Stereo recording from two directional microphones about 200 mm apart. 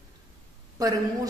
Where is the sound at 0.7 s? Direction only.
15° right (ahead or behind).